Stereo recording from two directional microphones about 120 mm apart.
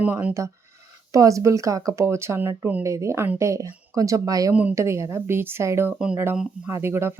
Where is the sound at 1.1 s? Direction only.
25° right (ahead or behind).